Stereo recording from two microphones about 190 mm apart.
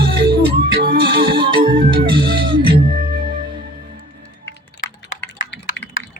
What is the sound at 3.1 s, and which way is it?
Music, 55° right (ahead or behind).